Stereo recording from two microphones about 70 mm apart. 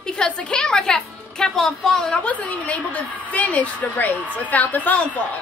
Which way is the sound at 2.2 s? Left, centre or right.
Centre.